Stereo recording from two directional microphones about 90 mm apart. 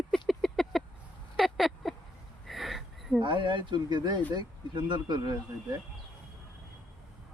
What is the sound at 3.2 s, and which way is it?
Speech, 65° right (ahead or behind).